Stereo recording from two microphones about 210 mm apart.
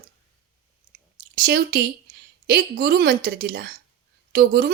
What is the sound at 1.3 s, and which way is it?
Speech, 45° right (ahead or behind).